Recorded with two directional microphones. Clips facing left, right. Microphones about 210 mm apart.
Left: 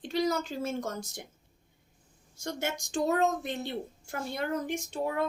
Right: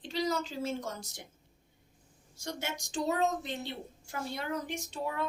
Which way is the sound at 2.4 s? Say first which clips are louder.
Left 4 dB; 50° left (ahead or behind).